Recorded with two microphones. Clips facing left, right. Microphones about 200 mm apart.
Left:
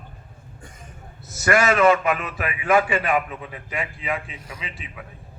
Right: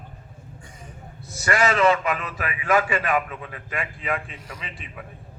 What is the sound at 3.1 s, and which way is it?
A man's voice, 15° left (ahead or behind).